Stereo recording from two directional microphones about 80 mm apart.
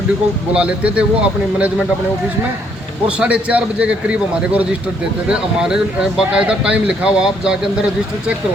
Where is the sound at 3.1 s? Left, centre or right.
Centre.